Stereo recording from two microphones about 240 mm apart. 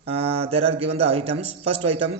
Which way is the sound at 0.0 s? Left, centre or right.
Right.